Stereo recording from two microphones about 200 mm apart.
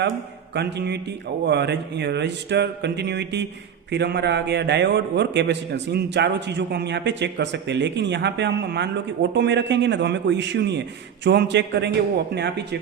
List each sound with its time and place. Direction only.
0.5 s a man's voice: 55° right (ahead or behind)